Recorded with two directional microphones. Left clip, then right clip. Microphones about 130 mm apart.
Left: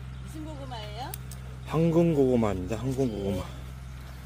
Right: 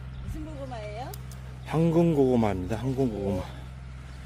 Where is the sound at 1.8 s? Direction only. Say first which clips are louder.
Even; 25° right (ahead or behind).